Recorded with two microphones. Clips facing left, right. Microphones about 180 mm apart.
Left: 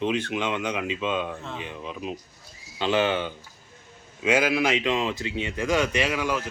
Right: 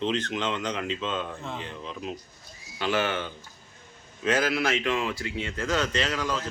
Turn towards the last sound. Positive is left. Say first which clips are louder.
# left 3 dB
turn(degrees=15)  # may be behind; listen again after turning